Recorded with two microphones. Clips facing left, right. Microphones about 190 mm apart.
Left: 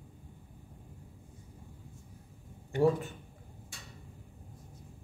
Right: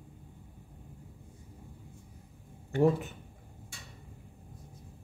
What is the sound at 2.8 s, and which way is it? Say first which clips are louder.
Speech: right 1 dB; 20° right (ahead or behind).